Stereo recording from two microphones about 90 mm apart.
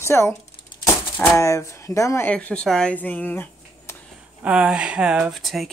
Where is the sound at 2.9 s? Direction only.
20° left (ahead or behind).